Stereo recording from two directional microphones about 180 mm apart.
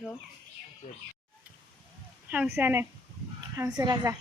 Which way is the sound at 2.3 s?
10° right (ahead or behind).